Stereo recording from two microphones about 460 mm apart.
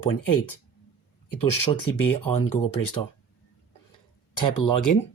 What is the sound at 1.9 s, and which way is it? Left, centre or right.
Speech, left.